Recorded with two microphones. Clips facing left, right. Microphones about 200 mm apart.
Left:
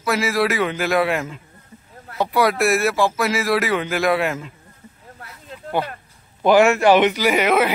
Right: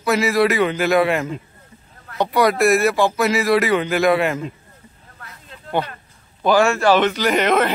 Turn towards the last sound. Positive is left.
turn(degrees=5)  # may be behind; listen again after turning